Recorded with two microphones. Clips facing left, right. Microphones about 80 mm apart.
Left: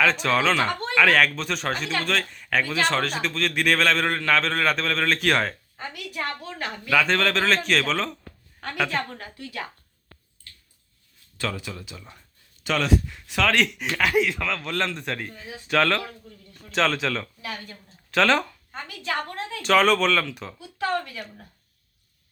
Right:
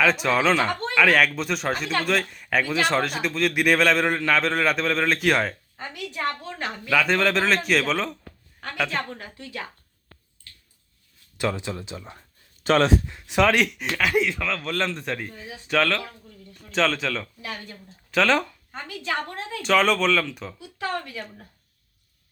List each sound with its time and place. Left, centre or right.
0.0 s a man's voice: centre
6.2 s speech: right
6.9 s a man's voice: centre
11.3 s speech: right
13.2 s speech: right
13.5 s a man's voice: centre
19.0 s speech: centre
19.6 s a man's voice: centre
20.6 s speech: centre